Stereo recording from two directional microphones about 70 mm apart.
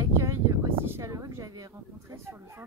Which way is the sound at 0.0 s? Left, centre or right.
Right.